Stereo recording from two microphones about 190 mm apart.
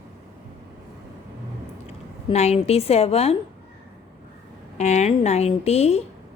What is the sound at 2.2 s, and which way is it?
Speech, 35° left (ahead or behind).